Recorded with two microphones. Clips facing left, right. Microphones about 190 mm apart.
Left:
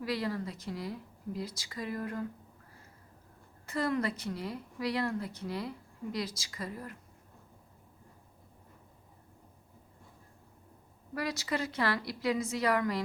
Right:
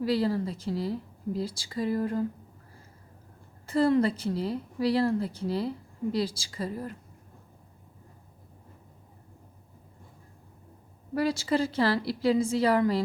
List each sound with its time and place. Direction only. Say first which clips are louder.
0.0 s speech: right 8 dB; 30° right (ahead or behind)
3.7 s speech: right 8 dB; 30° right (ahead or behind)
11.1 s speech: right 8 dB; 30° right (ahead or behind)